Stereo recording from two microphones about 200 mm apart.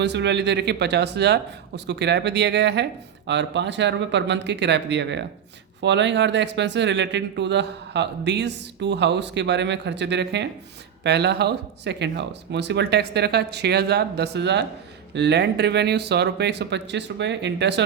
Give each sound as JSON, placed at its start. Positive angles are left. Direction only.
{"t": 0.0, "sound": "speech", "side_deg": -60}